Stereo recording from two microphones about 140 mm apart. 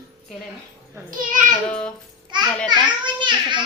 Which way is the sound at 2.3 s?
35° right (ahead or behind).